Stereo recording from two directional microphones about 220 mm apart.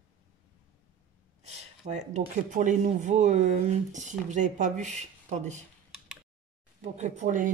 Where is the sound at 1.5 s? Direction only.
30° right (ahead or behind).